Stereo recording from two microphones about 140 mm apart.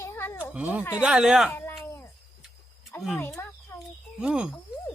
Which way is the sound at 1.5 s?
20° left (ahead or behind).